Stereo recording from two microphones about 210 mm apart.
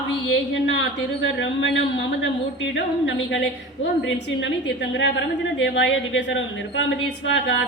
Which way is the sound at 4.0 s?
60° left (ahead or behind).